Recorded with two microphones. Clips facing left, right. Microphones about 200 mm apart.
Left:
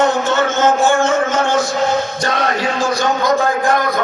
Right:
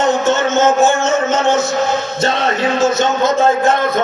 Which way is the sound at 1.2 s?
25° right (ahead or behind).